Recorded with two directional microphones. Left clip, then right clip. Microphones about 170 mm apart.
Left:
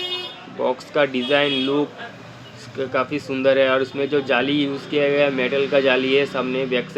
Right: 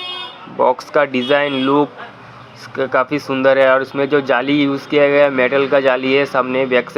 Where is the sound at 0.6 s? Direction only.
20° right (ahead or behind).